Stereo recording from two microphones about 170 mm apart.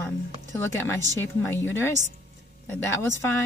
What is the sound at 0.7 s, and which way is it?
Speech, 15° left (ahead or behind).